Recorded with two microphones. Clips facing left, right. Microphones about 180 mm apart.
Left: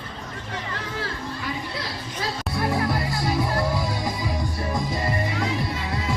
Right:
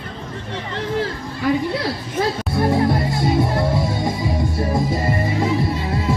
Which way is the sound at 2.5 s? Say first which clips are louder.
Right 7 dB; 25° right (ahead or behind).